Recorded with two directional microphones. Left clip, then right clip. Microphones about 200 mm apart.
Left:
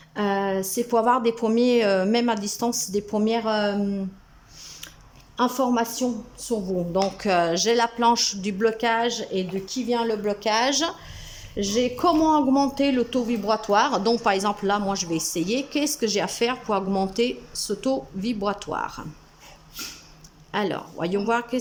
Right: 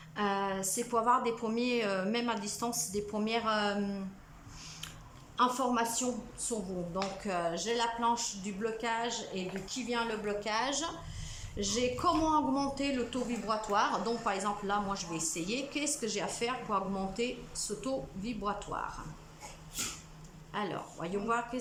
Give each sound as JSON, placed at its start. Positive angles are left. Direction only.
{"t": 0.2, "sound": "speech", "side_deg": 35}
{"t": 5.4, "sound": "speech", "side_deg": 35}
{"t": 6.9, "sound": "speech", "side_deg": 45}
{"t": 20.5, "sound": "speech", "side_deg": 40}